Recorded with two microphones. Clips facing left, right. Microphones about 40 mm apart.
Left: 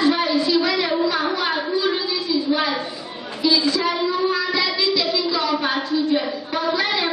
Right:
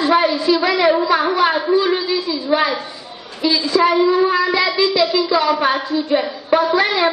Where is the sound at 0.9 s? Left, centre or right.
Right.